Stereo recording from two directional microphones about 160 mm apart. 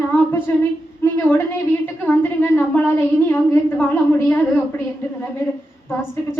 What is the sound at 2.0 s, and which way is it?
A woman's voice, 10° left (ahead or behind).